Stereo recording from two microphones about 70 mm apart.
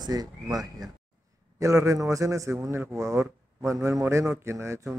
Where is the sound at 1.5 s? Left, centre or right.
Right.